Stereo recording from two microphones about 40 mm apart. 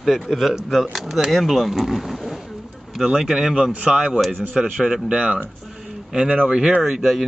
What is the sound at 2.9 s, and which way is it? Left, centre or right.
Speech, centre.